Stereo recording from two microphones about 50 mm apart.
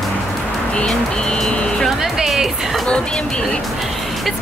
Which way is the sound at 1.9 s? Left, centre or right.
Centre.